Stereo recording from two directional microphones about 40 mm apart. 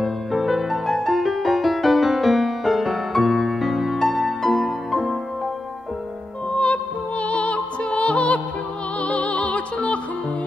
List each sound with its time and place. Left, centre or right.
0.0 s music: centre
6.5 s music: left